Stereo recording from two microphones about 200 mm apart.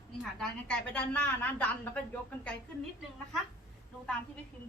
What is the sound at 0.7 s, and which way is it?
A woman's voice, 5° left (ahead or behind).